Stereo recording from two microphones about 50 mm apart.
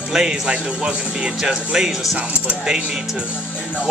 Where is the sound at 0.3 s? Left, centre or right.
Right.